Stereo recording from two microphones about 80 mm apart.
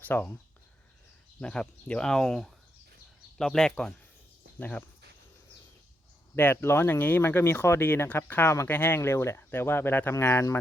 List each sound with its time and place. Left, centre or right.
0.0 s speech: left
1.4 s speech: centre
6.3 s speech: left